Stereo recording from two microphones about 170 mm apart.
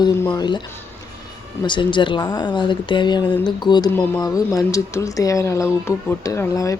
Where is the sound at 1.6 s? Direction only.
30° left (ahead or behind).